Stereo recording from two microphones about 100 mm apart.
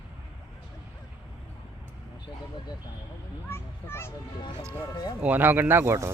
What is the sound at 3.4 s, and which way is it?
Speech, 25° left (ahead or behind).